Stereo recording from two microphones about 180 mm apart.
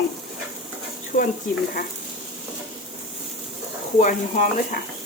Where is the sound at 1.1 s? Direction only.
55° left (ahead or behind).